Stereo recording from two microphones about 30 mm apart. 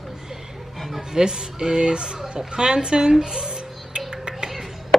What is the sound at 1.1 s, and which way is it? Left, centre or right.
Speech, right.